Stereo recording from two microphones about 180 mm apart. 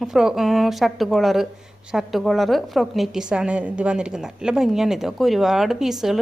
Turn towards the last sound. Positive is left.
turn(degrees=0)  # may be behind; listen again after turning